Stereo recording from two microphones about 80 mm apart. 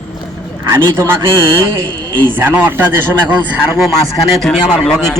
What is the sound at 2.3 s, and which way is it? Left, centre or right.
Speech, right.